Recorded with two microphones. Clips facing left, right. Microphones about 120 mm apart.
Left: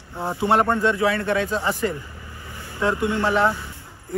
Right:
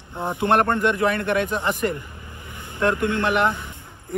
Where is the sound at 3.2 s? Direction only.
20° right (ahead or behind).